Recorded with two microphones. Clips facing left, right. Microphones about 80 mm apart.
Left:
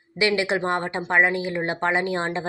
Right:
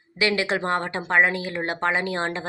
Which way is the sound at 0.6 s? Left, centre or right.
Left.